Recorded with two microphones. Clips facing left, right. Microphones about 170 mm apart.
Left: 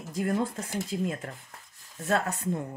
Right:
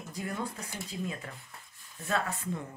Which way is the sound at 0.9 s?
80° left.